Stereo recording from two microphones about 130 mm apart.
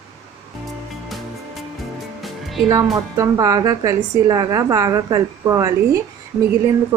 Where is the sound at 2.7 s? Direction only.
25° right (ahead or behind).